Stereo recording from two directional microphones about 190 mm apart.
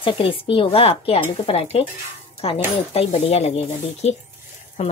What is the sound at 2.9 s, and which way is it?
Speech, 30° left (ahead or behind).